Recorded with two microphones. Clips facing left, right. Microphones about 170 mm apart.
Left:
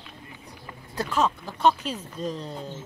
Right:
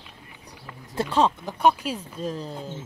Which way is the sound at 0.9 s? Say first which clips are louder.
Right 3 dB; 30° right (ahead or behind).